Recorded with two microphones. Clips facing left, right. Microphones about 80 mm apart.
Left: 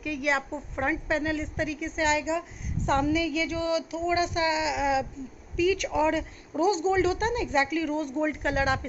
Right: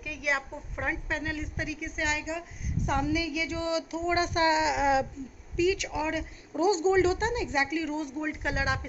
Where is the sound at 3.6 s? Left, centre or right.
Right.